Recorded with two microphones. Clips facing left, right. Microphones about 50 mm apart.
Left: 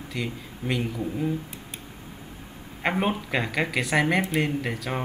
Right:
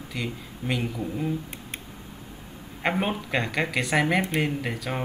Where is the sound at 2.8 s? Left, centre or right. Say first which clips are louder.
Left 1 dB; centre.